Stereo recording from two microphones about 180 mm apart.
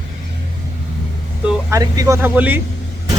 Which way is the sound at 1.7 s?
20° right (ahead or behind).